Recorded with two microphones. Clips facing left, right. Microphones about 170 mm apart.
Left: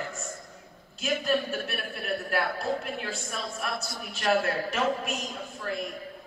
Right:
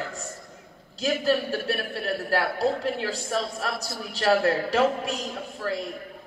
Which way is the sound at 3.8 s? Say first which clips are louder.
Right 5 dB; 35° right (ahead or behind).